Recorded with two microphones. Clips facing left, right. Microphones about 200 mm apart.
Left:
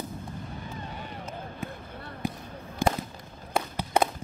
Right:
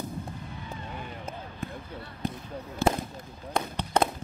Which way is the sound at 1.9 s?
50° left (ahead or behind).